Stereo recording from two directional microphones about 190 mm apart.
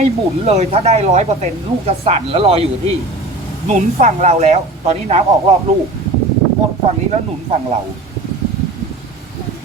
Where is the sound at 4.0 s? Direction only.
35° right (ahead or behind).